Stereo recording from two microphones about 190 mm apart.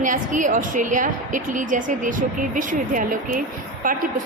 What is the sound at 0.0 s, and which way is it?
A woman's voice, 40° right (ahead or behind).